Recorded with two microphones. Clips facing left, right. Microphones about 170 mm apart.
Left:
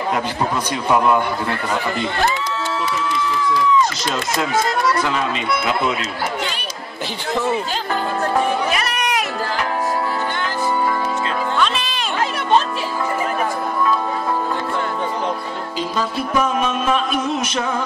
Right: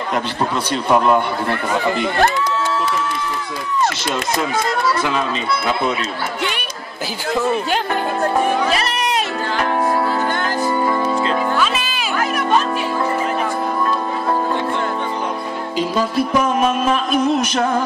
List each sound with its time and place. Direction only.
2.2 s speech: 55° right (ahead or behind)
8.7 s a sound: 30° right (ahead or behind)
11.5 s music: 5° right (ahead or behind)